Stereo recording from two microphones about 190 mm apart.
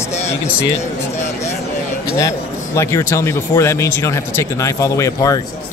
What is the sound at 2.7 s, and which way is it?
Speech, 15° left (ahead or behind).